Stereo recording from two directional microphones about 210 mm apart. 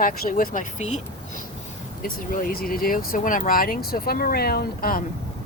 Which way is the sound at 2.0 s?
45° left (ahead or behind).